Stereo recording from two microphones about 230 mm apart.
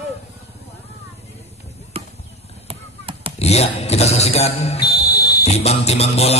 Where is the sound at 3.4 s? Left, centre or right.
Left.